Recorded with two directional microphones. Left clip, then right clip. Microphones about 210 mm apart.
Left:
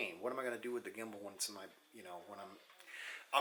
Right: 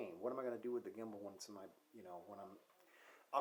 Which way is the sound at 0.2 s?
10° right (ahead or behind).